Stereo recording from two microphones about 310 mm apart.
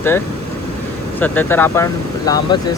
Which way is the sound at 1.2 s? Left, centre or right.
Centre.